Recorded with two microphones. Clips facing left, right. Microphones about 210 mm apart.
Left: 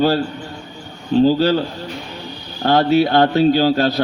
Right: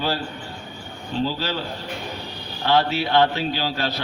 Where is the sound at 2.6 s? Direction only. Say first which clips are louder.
Left 7 dB; 40° left (ahead or behind).